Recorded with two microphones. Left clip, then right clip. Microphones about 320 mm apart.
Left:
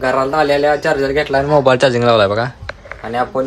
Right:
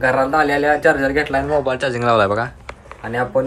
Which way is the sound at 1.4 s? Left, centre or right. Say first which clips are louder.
Left 7 dB; left.